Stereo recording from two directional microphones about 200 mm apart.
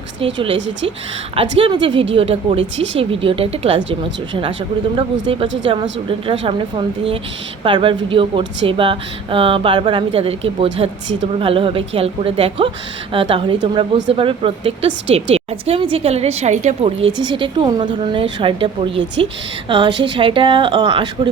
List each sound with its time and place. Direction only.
0.3 s speech: 25° right (ahead or behind)
5.2 s speech: 25° right (ahead or behind)